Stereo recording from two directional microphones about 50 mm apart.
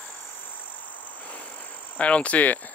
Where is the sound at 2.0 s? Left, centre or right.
Left.